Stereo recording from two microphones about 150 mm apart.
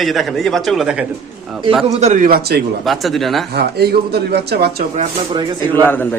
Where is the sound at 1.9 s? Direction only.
50° right (ahead or behind); by 2.6 s 75° right (ahead or behind).